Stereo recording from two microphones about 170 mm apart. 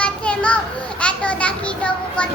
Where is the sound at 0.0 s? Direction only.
5° left (ahead or behind).